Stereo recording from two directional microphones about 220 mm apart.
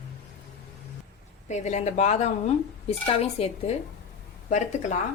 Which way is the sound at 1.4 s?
30° left (ahead or behind).